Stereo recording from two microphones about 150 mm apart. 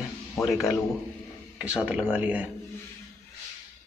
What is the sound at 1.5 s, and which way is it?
Speech, 5° right (ahead or behind).